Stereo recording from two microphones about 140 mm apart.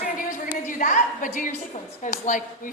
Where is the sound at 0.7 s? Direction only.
65° left (ahead or behind).